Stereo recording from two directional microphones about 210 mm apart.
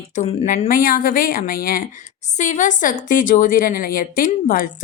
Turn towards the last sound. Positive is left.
turn(degrees=40)  # may be behind; listen again after turning